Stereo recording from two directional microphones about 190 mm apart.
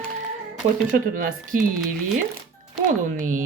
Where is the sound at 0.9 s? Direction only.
45° right (ahead or behind).